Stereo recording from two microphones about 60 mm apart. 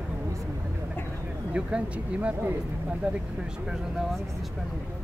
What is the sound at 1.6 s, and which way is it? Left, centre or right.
Speech, centre.